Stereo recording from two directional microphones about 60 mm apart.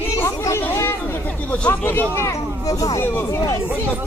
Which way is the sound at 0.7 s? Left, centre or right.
Left.